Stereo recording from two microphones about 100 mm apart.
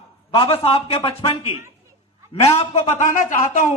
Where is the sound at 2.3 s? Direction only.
85° left.